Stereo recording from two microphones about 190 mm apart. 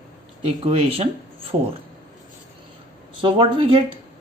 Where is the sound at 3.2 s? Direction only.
25° right (ahead or behind).